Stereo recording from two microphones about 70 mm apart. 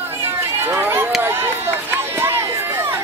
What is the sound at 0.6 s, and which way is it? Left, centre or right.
Run, right.